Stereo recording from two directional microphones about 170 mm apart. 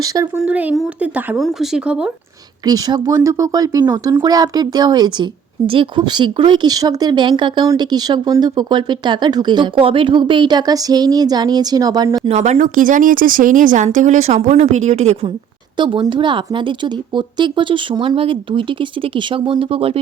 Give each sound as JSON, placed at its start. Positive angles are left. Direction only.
{"t": 0.0, "sound": "speech", "side_deg": -20}
{"t": 0.3, "sound": "a woman's voice", "side_deg": -5}
{"t": 2.6, "sound": "speech", "side_deg": -20}
{"t": 12.3, "sound": "speech", "side_deg": -45}
{"t": 15.8, "sound": "speech", "side_deg": -30}